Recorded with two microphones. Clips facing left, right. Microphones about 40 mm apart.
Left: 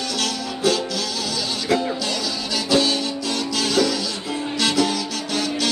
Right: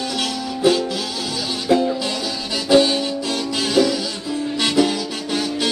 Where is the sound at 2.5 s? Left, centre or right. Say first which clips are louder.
Right 5 dB; centre.